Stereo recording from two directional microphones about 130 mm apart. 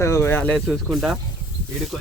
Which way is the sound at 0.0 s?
20° left (ahead or behind).